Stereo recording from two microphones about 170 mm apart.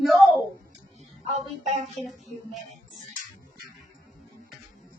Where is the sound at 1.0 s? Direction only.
40° right (ahead or behind).